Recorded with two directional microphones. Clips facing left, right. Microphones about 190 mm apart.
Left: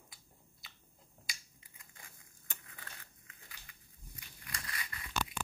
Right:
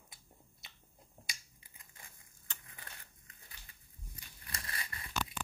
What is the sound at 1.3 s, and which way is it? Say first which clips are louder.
Finger snapping: left 2 dB; 30° right (ahead or behind).